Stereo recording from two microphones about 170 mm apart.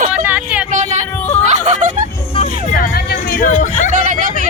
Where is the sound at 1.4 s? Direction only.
45° right (ahead or behind).